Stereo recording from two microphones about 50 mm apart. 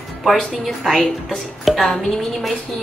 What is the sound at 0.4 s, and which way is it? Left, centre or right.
A woman's voice, centre.